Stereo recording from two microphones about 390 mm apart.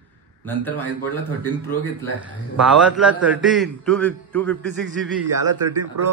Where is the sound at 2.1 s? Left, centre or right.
Centre.